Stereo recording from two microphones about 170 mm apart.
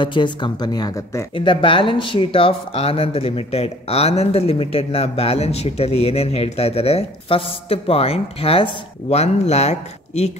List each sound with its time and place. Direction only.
0.0 s speech: 30° left (ahead or behind)